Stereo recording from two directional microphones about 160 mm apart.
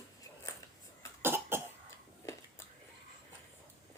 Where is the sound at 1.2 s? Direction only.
15° right (ahead or behind).